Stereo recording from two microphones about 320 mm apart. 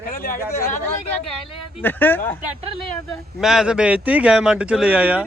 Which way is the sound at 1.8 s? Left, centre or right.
Centre.